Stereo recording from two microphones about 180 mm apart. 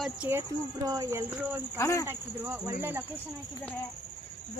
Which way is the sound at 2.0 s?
15° right (ahead or behind).